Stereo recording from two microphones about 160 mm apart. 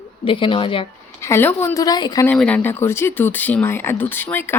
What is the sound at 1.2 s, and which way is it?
Speech, 15° left (ahead or behind).